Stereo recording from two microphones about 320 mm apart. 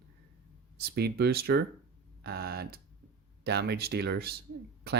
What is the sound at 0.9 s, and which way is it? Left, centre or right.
Speech, right.